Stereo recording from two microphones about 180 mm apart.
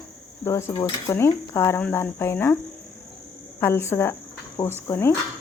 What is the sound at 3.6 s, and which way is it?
Speech, 15° left (ahead or behind).